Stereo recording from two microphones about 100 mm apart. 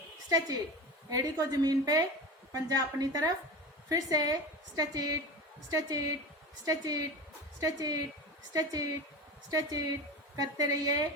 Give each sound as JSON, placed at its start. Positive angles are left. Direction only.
{"t": 0.3, "sound": "a woman's voice", "side_deg": -35}